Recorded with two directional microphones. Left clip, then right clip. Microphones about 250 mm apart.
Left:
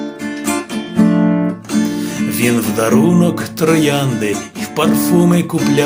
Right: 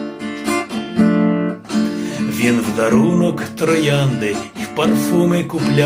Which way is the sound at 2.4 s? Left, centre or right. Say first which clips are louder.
Left 1 dB; left.